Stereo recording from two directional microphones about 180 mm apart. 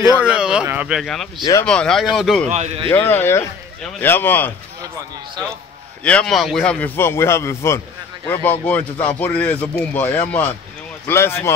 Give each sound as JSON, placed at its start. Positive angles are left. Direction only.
{"t": 0.2, "sound": "speech", "side_deg": -5}
{"t": 1.4, "sound": "speech", "side_deg": 15}
{"t": 1.7, "sound": "speech", "side_deg": 5}
{"t": 2.4, "sound": "speech", "side_deg": -40}
{"t": 2.9, "sound": "speech", "side_deg": 10}
{"t": 6.0, "sound": "speech", "side_deg": 5}